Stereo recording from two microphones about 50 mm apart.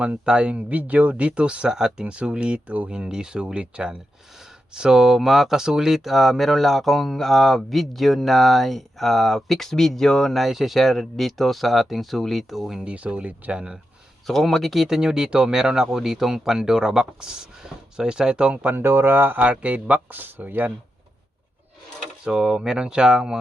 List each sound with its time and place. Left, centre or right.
0.3 s speech: centre
2.9 s speech: centre
12.8 s speech: right
14.3 s speech: centre; by 18.8 s right
18.8 s speech: right
19.4 s speech: right
22.2 s speech: centre